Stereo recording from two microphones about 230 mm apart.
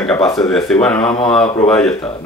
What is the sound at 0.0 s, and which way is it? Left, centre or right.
Speech, centre.